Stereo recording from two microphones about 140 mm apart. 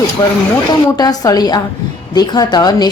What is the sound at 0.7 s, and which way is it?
A woman's voice, 30° left (ahead or behind).